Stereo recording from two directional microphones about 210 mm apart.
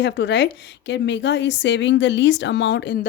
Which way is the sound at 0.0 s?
55° left (ahead or behind).